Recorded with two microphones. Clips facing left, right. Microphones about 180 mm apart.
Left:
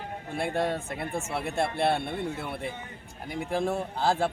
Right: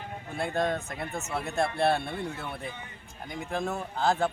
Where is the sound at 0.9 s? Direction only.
30° left (ahead or behind).